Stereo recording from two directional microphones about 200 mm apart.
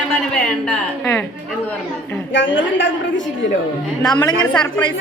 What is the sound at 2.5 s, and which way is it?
Speech, 65° left (ahead or behind).